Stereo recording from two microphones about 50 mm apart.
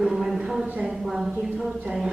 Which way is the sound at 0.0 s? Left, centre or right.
Centre.